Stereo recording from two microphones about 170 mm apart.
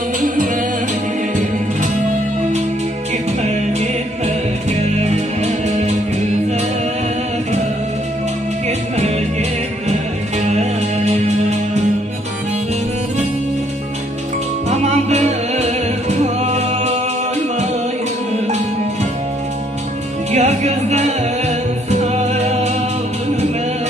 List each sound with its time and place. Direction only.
4.6 s music: 40° right (ahead or behind)
8.6 s music: 40° right (ahead or behind)
14.7 s music: 40° right (ahead or behind)
20.2 s music: 40° right (ahead or behind)